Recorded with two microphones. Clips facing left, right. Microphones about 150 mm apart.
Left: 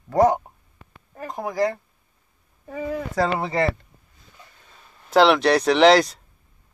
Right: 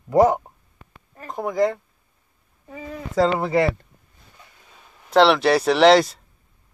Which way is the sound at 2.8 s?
70° left (ahead or behind).